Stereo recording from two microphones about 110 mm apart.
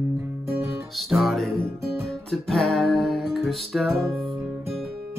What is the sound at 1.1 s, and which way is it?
Music, centre (ahead or behind).